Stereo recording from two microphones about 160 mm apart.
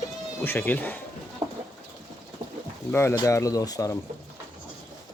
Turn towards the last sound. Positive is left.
turn(degrees=20)  # may be behind; listen again after turning